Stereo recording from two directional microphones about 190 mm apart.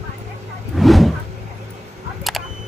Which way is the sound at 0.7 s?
Centre (ahead or behind).